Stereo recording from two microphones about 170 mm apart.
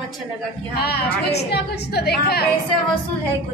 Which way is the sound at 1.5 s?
70° left (ahead or behind).